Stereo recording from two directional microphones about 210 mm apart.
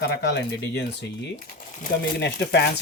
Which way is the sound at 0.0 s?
50° left (ahead or behind).